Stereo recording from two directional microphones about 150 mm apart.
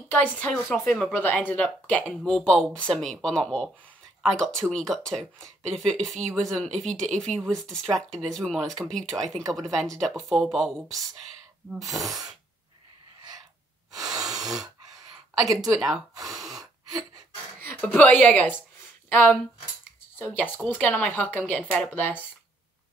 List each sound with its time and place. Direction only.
0.1 s speech: 10° left (ahead or behind)
11.8 s speech: centre (ahead or behind)
12.1 s sneeze: 25° right (ahead or behind)
14.1 s a sound: 25° right (ahead or behind)
15.4 s sneeze: 25° right (ahead or behind)
16.3 s gasp: centre (ahead or behind)
17.6 s a woman's voice: 15° left (ahead or behind)